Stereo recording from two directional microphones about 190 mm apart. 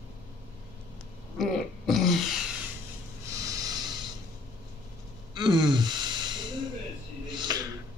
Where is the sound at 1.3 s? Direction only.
Centre (ahead or behind).